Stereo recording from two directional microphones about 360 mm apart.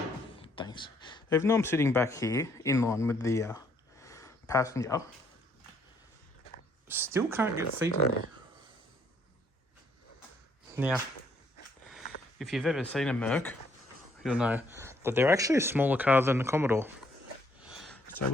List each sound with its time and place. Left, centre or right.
0.3 s speech: centre
4.0 s a sound: centre
6.8 s speech: centre
10.8 s speech: centre
12.4 s speech: centre
17.6 s a sound: centre